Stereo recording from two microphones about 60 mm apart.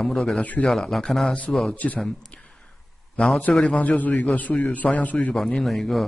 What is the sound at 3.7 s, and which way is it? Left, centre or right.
A man's voice, left.